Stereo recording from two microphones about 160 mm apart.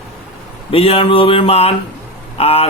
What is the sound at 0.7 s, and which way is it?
A man's voice, 35° left (ahead or behind).